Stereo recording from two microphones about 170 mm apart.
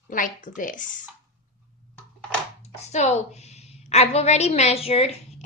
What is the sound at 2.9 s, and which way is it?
A woman's voice, 40° left (ahead or behind).